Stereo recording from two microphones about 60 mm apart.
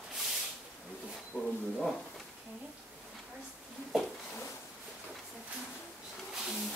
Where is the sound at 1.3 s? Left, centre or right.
Right.